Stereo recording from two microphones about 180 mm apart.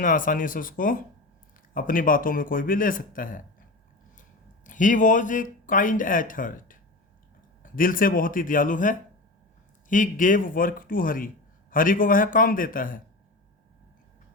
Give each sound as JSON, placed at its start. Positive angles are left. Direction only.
{"t": 0.0, "sound": "speech", "side_deg": 50}